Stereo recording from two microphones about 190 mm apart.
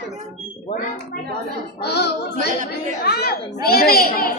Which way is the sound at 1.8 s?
60° left (ahead or behind).